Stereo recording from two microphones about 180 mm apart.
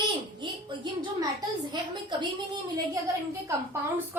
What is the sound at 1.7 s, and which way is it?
Speech, 25° right (ahead or behind).